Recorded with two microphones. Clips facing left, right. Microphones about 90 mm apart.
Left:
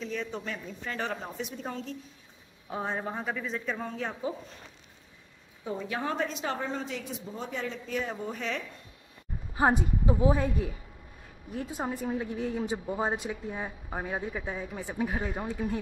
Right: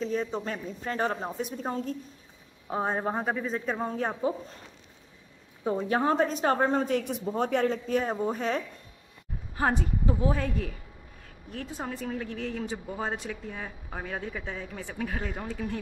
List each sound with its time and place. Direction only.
0.0 s a woman's voice: 35° right (ahead or behind)
5.6 s a woman's voice: 40° right (ahead or behind); by 7.7 s 60° right (ahead or behind)
7.7 s a woman's voice: 45° right (ahead or behind)
9.6 s a woman's voice: 15° left (ahead or behind)